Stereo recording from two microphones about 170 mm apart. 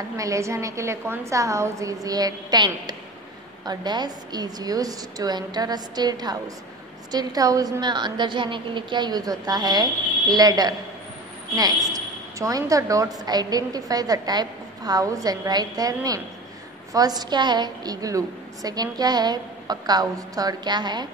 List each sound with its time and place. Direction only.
0.2 s a woman's voice: 20° right (ahead or behind)